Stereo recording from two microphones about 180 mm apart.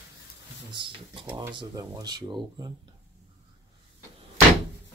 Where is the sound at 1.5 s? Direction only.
25° right (ahead or behind).